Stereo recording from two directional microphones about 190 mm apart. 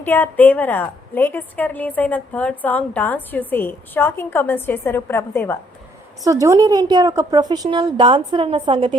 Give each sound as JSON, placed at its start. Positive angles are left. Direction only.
{"t": 0.0, "sound": "a woman's voice", "side_deg": 10}
{"t": 6.2, "sound": "a woman's voice", "side_deg": -15}